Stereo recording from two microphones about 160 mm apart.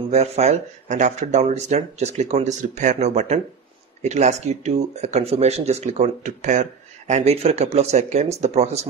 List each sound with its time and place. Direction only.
0.1 s speech: 45° right (ahead or behind)